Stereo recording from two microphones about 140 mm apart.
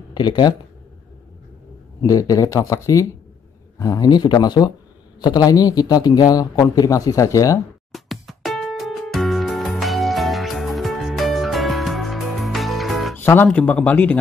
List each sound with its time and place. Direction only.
0.1 s speech: 30° left (ahead or behind)
2.0 s a man's voice: 25° left (ahead or behind)
7.9 s music: centre (ahead or behind)
13.1 s speech: 15° left (ahead or behind)